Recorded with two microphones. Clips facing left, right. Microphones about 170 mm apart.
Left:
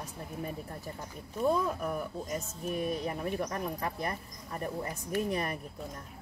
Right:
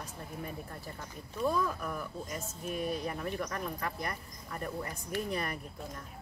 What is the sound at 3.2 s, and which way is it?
Speech, 20° left (ahead or behind).